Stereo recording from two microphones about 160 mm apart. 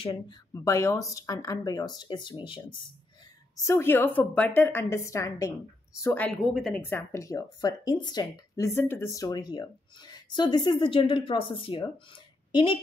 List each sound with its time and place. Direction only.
0.0 s speech: 25° left (ahead or behind)
3.5 s a woman's voice: 15° left (ahead or behind); by 6.8 s centre (ahead or behind)
6.8 s speech: 15° left (ahead or behind); by 12.7 s 30° left (ahead or behind)